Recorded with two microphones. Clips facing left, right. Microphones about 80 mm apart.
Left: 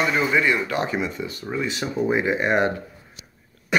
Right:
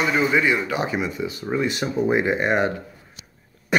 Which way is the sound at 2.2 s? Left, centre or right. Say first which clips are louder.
Right 1 dB; right.